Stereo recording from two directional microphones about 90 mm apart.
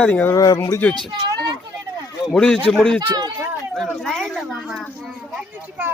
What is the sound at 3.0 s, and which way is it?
Speech, 50° right (ahead or behind).